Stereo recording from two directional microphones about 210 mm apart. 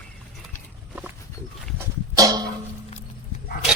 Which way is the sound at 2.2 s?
15° right (ahead or behind).